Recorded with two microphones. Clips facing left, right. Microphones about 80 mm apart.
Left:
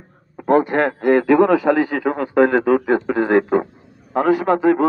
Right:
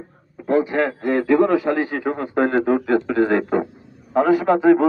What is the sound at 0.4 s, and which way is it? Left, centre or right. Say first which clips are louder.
Speech: left 3 dB; left.